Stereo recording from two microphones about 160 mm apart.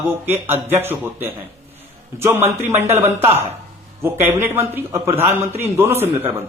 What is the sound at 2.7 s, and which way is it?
Speech, 15° right (ahead or behind).